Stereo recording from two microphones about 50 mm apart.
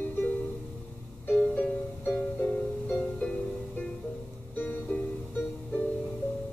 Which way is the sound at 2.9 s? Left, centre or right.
Left.